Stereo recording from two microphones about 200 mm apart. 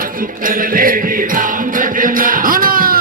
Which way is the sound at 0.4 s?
45° right (ahead or behind).